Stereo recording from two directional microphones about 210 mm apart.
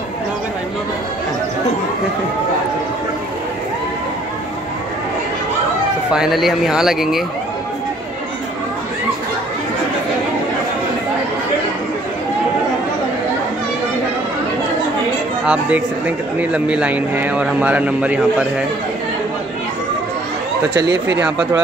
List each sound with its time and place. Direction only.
6.1 s speech: centre (ahead or behind)
15.4 s a man's voice: 5° right (ahead or behind)
20.8 s speech: 55° right (ahead or behind)